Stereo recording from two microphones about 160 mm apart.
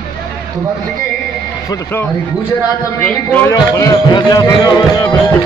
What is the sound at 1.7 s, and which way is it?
Speech, 15° left (ahead or behind).